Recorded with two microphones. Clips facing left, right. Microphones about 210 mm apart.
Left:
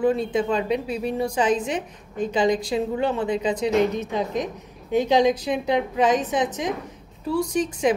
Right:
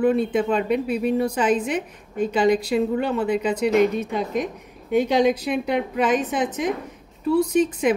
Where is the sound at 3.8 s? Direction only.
10° right (ahead or behind).